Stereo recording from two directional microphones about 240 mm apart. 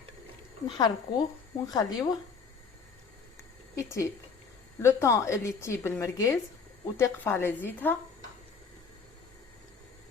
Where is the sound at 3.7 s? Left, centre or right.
Centre.